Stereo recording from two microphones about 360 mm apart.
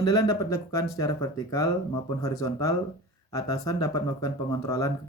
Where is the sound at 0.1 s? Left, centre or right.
Centre.